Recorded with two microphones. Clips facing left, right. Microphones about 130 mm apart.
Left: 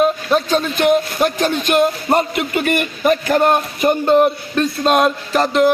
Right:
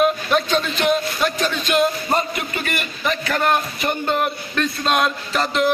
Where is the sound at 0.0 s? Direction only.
30° left (ahead or behind).